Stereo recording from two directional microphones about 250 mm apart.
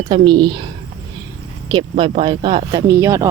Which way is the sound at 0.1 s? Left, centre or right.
Centre.